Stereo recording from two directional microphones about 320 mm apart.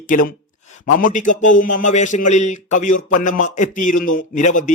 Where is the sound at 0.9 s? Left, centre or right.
Left.